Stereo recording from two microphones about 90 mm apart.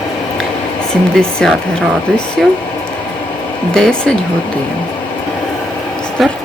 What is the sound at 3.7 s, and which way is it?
Speech, 5° left (ahead or behind).